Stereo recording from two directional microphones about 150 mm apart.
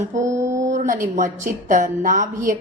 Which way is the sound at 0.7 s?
60° right (ahead or behind).